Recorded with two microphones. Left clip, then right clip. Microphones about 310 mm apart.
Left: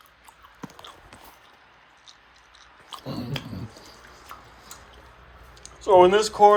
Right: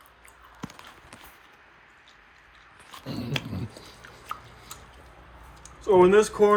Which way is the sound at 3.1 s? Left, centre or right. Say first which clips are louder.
Right 3 dB; centre.